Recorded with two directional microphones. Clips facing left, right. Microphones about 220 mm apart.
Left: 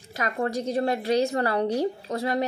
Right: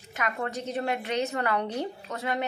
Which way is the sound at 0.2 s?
35° left (ahead or behind).